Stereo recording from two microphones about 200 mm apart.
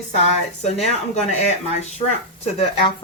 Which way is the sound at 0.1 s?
35° left (ahead or behind).